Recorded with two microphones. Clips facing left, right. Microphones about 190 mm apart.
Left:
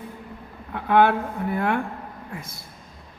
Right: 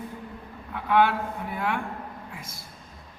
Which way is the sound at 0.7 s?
50° left (ahead or behind).